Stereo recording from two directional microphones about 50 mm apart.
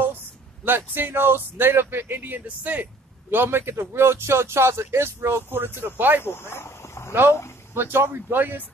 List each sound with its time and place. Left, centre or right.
0.7 s speech: right
6.2 s speech: left
7.7 s speech: right